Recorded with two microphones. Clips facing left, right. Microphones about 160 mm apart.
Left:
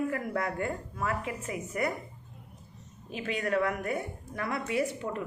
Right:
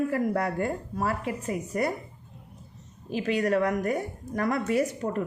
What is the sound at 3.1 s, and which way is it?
A woman's voice, 35° right (ahead or behind).